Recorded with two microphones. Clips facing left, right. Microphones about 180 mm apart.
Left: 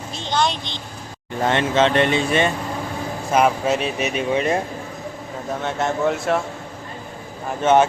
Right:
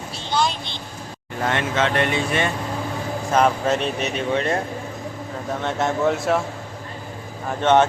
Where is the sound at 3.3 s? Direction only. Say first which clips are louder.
Left 1 dB; 10° left (ahead or behind).